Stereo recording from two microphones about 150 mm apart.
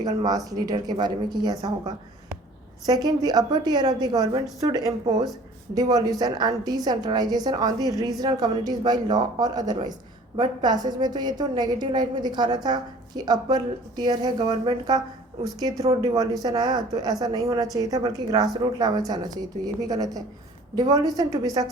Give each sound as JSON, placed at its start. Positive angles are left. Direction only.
{"t": 0.0, "sound": "a woman's voice", "side_deg": -25}